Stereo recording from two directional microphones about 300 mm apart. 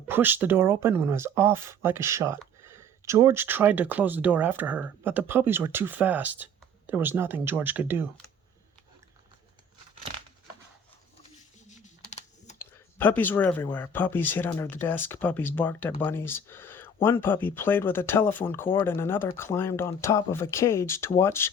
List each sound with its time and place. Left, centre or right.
0.1 s speech: centre
11.7 s typing: left
12.5 s speech: centre